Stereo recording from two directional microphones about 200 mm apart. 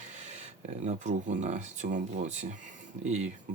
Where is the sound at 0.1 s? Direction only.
35° right (ahead or behind).